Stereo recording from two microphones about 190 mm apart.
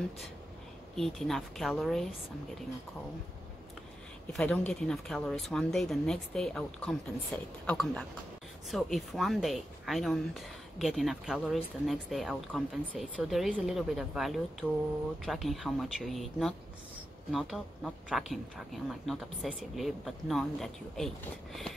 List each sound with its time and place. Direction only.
0.9 s speech: centre (ahead or behind)
4.3 s speech: 5° left (ahead or behind)